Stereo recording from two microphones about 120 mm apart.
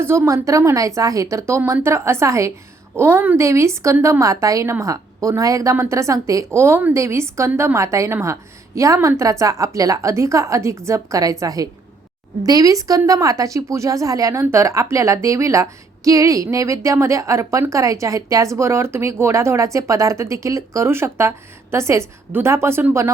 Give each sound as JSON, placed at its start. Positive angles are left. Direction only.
{"t": 0.0, "sound": "speech", "side_deg": -20}